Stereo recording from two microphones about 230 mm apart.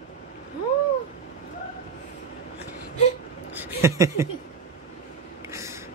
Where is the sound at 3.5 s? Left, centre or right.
Centre.